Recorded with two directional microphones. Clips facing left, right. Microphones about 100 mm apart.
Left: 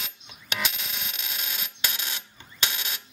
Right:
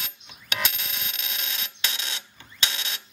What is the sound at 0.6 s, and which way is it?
Cash register, centre (ahead or behind).